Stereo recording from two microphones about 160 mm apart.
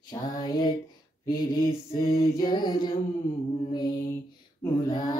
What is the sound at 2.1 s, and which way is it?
Music, 25° left (ahead or behind).